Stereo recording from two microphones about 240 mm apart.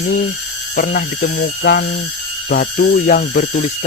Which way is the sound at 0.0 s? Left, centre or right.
Left.